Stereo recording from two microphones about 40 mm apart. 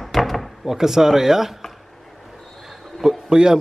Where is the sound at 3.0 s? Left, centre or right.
Centre.